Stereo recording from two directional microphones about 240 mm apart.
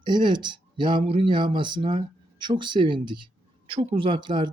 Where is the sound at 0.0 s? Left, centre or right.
Centre.